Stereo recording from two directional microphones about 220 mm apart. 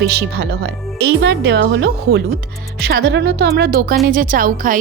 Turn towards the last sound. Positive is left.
turn(degrees=-40)  # may be behind; listen again after turning